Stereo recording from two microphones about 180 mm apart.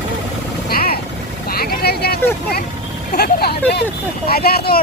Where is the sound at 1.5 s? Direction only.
60° left (ahead or behind).